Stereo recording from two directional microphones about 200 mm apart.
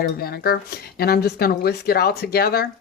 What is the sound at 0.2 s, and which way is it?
Speech, 50° left (ahead or behind).